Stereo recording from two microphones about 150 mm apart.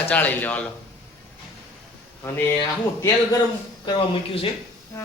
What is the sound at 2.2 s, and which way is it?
Speech, 20° left (ahead or behind).